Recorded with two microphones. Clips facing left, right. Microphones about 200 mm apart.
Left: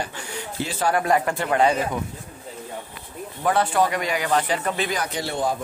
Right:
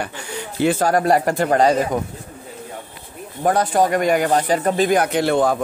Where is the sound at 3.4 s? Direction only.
40° right (ahead or behind).